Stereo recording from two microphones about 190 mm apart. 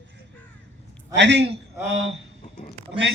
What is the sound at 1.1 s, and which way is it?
Speech, 70° right (ahead or behind).